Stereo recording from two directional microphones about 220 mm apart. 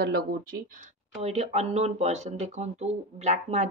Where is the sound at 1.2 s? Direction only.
30° right (ahead or behind).